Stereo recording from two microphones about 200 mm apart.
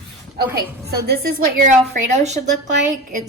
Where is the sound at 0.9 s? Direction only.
50° right (ahead or behind); by 2.4 s 35° right (ahead or behind).